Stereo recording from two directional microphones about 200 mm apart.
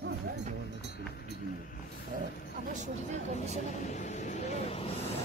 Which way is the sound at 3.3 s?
35° left (ahead or behind).